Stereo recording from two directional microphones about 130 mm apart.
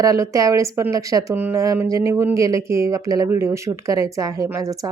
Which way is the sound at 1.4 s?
15° right (ahead or behind).